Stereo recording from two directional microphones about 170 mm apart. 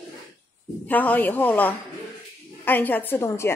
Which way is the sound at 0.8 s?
10° left (ahead or behind).